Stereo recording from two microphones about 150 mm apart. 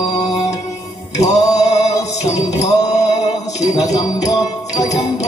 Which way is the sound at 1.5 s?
50° left (ahead or behind).